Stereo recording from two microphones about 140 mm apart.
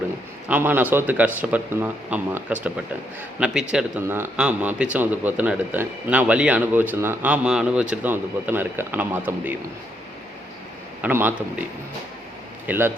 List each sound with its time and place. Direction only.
0.4 s a man's voice: 10° right (ahead or behind)
4.0 s a man's voice: 15° right (ahead or behind)
11.0 s a man's voice: 15° right (ahead or behind)
12.6 s speech: 15° right (ahead or behind)